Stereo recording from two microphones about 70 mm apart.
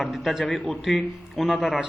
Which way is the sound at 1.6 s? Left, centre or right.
Centre.